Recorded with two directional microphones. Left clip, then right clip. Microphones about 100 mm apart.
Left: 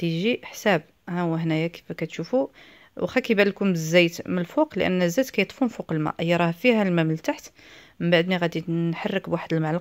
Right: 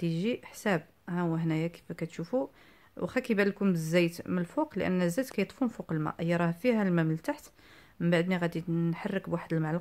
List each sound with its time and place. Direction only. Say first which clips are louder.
0.0 s speech: left 8 dB; 20° left (ahead or behind)